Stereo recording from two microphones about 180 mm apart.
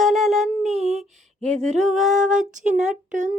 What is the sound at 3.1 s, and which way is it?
Speech, 45° right (ahead or behind).